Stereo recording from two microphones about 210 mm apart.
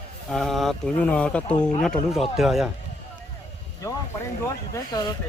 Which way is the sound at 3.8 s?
15° left (ahead or behind).